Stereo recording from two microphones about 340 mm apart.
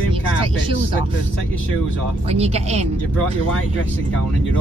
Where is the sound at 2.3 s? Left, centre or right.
Centre.